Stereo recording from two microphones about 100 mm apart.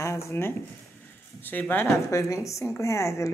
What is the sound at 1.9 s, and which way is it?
Speech, 30° left (ahead or behind).